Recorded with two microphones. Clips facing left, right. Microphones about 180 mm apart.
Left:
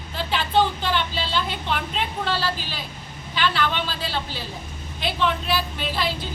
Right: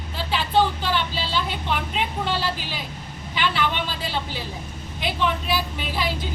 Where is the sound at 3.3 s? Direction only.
15° right (ahead or behind).